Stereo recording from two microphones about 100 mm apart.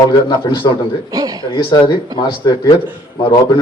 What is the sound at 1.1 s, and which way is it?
Speech, 40° right (ahead or behind).